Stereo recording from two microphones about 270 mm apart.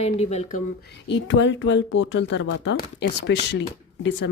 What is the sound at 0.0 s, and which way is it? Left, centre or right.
Speech, left.